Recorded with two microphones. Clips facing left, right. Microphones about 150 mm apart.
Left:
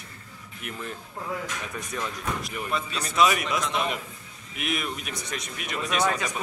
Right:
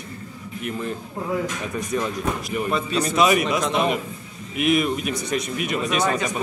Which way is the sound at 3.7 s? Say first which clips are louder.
Right 7 dB; 55° right (ahead or behind).